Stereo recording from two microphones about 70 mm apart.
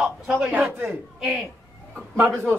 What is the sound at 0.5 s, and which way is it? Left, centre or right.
Speech, right.